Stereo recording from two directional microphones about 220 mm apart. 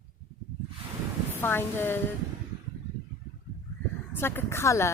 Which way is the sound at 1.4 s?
10° left (ahead or behind).